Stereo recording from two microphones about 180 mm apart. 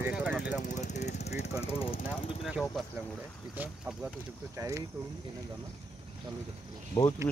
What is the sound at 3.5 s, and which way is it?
Speech, 10° right (ahead or behind).